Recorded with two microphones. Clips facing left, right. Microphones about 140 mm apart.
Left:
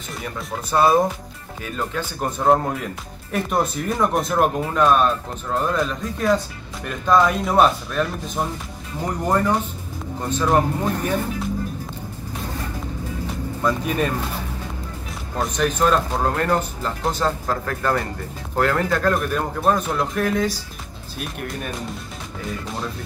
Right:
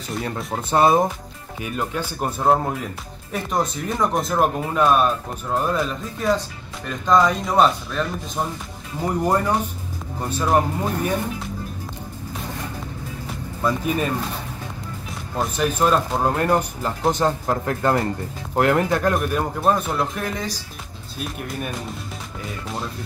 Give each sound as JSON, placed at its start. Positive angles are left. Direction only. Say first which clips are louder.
{"t": 0.7, "sound": "speech", "louder": "even", "side_deg": -20}
{"t": 1.6, "sound": "speech", "louder": "right 1 dB", "side_deg": -10}
{"t": 9.0, "sound": "speech", "louder": "even", "side_deg": -10}
{"t": 13.6, "sound": "speech", "louder": "even", "side_deg": -5}
{"t": 15.3, "sound": "speech", "louder": "even", "side_deg": -5}
{"t": 19.1, "sound": "speech", "louder": "right 1 dB", "side_deg": -5}